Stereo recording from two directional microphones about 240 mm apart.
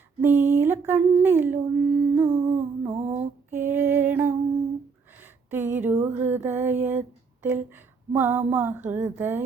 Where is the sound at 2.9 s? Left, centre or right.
Right.